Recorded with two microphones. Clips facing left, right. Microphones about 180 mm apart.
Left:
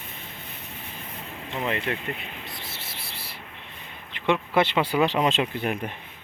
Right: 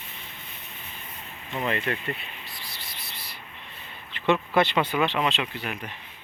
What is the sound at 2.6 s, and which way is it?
Cricket, 25° left (ahead or behind).